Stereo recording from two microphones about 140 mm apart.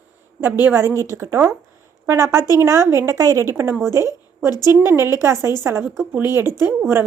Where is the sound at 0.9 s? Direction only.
20° left (ahead or behind).